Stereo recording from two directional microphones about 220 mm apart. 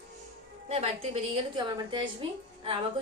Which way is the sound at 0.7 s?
25° right (ahead or behind).